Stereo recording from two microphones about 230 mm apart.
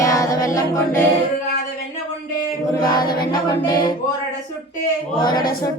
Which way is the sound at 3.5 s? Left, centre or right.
Centre.